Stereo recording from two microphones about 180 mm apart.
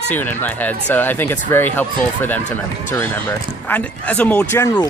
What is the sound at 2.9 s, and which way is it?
Speech, 10° left (ahead or behind).